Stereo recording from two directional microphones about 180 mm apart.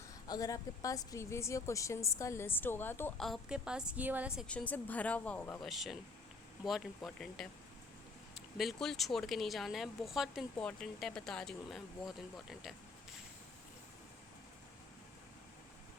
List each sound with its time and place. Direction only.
0.3 s a woman's voice: 20° left (ahead or behind)
3.2 s speech: centre (ahead or behind)
4.4 s a woman's voice: 10° left (ahead or behind)